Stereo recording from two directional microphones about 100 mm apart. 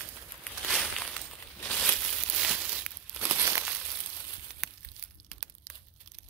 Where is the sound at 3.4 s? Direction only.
25° right (ahead or behind).